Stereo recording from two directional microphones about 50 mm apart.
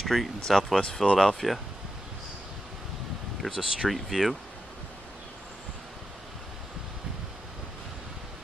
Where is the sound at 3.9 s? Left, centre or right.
Centre.